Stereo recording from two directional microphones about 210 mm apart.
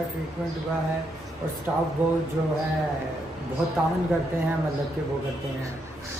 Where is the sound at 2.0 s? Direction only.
10° right (ahead or behind).